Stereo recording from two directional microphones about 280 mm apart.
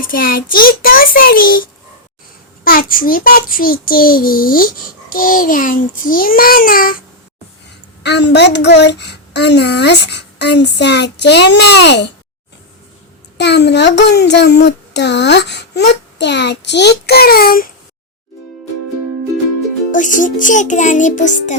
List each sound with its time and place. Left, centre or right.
0.0 s a child's voice: left
2.6 s a child's voice: left
8.0 s a child's voice: left
13.3 s a child's voice: left
19.9 s music: left